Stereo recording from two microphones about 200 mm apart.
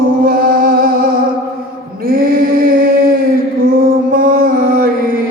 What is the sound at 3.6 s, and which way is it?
Music, 45° right (ahead or behind).